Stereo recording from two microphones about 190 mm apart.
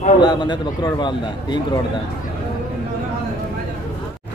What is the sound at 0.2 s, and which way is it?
A man's voice, 25° left (ahead or behind).